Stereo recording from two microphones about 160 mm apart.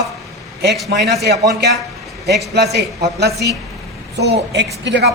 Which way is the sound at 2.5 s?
90° right.